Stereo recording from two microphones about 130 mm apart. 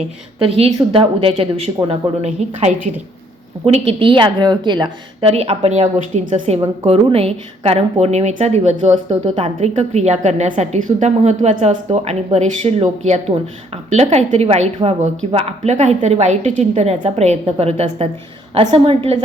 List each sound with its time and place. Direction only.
0.3 s a woman's voice: 45° right (ahead or behind)
3.7 s speech: 45° right (ahead or behind)
5.3 s a woman's voice: 55° right (ahead or behind)